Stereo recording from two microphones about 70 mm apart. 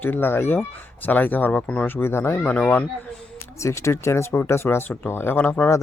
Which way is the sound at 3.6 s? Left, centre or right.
Left.